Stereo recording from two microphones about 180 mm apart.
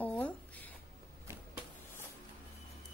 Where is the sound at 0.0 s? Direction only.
10° left (ahead or behind).